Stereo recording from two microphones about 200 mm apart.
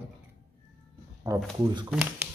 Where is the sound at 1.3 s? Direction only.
15° right (ahead or behind).